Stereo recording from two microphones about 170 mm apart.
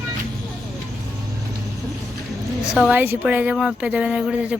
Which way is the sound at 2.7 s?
10° right (ahead or behind).